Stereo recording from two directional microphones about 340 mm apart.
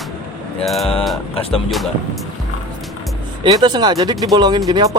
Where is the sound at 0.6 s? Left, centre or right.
Centre.